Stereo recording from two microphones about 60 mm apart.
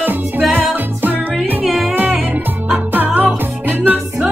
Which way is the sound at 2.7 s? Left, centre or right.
Right.